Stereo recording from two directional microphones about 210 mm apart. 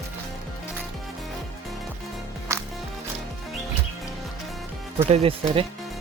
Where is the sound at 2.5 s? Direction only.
15° right (ahead or behind).